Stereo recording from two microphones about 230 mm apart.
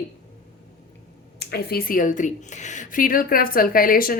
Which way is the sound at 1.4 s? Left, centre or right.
Left.